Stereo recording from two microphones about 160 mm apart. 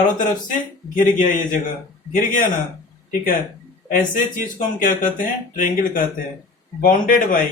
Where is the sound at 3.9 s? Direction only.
55° left (ahead or behind).